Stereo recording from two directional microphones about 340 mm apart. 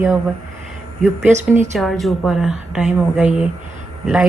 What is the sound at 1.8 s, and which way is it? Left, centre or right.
A woman's voice, centre.